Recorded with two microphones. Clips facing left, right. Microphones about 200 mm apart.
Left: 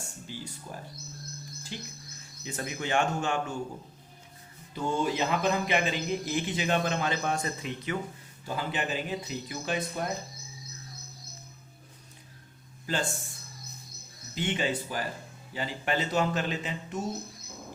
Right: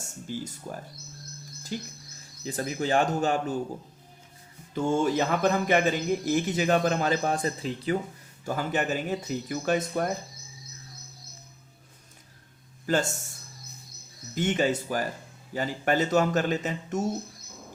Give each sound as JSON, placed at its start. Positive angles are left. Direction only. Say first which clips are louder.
{"t": 0.0, "sound": "speech", "louder": "right 6 dB", "side_deg": -45}
{"t": 4.7, "sound": "speech", "louder": "right 5 dB", "side_deg": -50}
{"t": 8.4, "sound": "speech", "louder": "right 4 dB", "side_deg": -45}
{"t": 12.8, "sound": "speech", "louder": "right 6 dB", "side_deg": -45}
{"t": 14.3, "sound": "speech", "louder": "right 5 dB", "side_deg": -45}